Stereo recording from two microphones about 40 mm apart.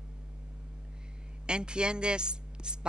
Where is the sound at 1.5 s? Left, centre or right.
Right.